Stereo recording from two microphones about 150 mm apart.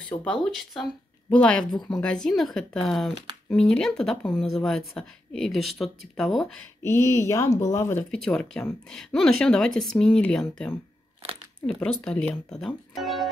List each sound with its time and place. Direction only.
0.1 s speech: 5° left (ahead or behind)
6.8 s speech: 20° left (ahead or behind)
8.1 s speech: 5° left (ahead or behind)